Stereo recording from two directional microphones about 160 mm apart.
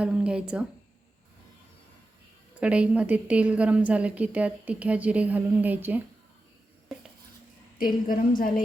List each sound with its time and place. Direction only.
0.0 s speech: 5° right (ahead or behind)
2.6 s a woman's voice: 5° right (ahead or behind)
8.0 s a woman's voice: 60° left (ahead or behind)